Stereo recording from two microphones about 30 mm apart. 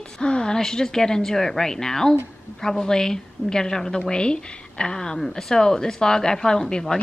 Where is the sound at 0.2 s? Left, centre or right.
Left.